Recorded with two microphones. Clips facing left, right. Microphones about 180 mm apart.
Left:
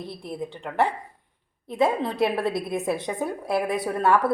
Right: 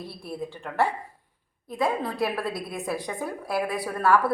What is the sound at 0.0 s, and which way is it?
A woman's voice, 20° left (ahead or behind).